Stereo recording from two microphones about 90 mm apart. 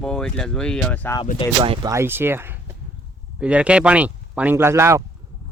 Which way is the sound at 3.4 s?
10° right (ahead or behind).